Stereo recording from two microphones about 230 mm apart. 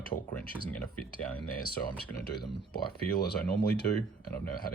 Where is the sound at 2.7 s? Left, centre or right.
Left.